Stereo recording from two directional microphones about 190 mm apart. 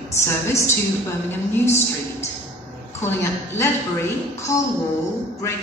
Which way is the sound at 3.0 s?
15° left (ahead or behind).